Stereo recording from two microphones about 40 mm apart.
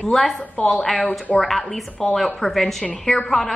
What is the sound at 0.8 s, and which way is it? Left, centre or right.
Speech, centre.